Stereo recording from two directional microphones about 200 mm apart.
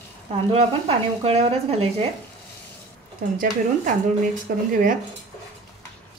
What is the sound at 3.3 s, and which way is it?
Speech, 40° right (ahead or behind).